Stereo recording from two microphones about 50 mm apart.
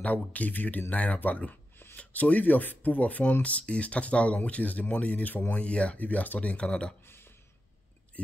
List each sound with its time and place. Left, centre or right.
0.0 s speech: left
6.5 s speech: centre
7.1 s a sound: left